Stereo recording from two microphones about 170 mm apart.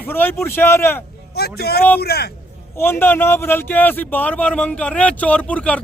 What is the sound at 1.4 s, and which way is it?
Speech, 70° left (ahead or behind).